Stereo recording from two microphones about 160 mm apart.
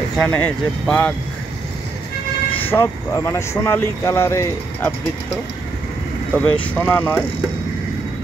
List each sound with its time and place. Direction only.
0.2 s speech: 5° left (ahead or behind)
2.7 s speech: 15° left (ahead or behind)
6.3 s speech: 5° left (ahead or behind)